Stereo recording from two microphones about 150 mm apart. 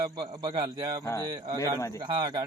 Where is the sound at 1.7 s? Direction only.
20° left (ahead or behind).